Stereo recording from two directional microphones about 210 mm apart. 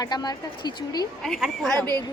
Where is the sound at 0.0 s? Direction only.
20° left (ahead or behind).